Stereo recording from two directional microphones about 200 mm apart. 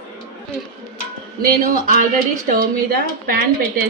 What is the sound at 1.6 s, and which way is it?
A woman's voice, 45° right (ahead or behind).